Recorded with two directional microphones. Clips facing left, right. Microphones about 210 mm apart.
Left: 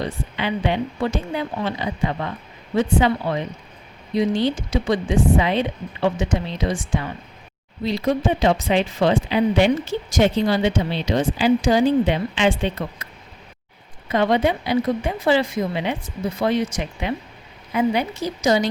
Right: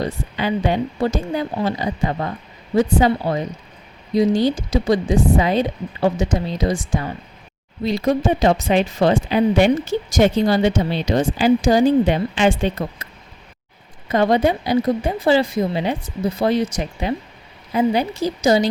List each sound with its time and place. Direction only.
0.0 s speech: 40° right (ahead or behind)
14.1 s speech: 40° right (ahead or behind)